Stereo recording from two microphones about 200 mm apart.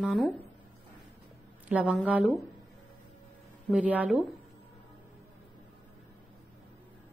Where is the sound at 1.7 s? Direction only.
5° right (ahead or behind).